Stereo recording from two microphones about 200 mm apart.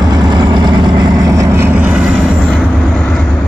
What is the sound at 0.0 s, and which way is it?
Vehicle, 20° right (ahead or behind).